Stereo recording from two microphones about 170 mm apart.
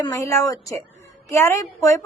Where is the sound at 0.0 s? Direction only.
20° left (ahead or behind).